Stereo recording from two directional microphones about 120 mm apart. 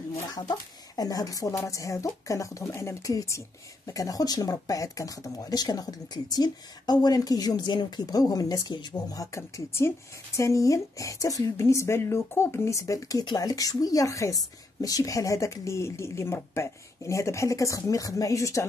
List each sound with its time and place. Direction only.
0.1 s speech: 30° left (ahead or behind)